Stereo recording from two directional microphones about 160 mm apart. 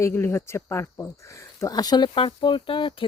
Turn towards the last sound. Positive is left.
turn(degrees=35)  # may be behind; listen again after turning